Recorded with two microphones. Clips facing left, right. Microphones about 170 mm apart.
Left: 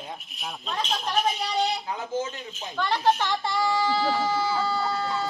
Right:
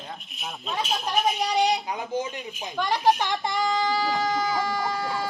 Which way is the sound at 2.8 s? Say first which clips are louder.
Right 1 dB; 15° right (ahead or behind).